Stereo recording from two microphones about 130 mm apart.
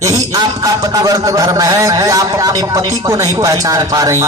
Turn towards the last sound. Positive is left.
turn(degrees=-25)  # may be behind; listen again after turning